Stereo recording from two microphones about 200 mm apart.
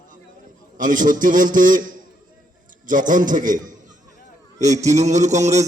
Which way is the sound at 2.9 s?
40° right (ahead or behind).